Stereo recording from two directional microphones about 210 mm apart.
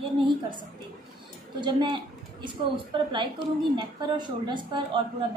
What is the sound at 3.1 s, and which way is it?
A woman's voice, 25° right (ahead or behind).